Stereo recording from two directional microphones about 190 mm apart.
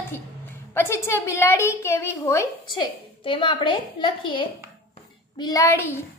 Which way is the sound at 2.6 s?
25° left (ahead or behind).